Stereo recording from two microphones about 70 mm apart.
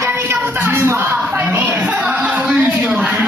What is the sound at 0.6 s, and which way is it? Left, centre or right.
Music, right.